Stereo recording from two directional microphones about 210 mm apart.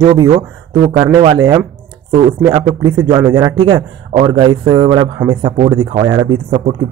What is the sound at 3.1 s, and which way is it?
A man's voice, 15° right (ahead or behind).